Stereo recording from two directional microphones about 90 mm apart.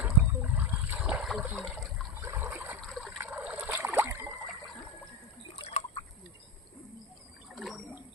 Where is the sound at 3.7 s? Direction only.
20° right (ahead or behind).